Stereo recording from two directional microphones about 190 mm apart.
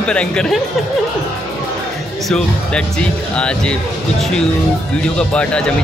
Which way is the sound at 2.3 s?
5° left (ahead or behind).